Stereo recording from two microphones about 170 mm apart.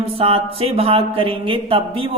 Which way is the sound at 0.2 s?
35° right (ahead or behind).